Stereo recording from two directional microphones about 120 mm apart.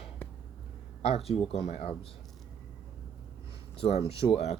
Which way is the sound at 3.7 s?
55° left (ahead or behind).